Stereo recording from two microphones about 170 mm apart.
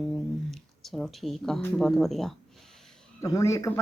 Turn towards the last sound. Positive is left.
turn(degrees=20)  # may be behind; listen again after turning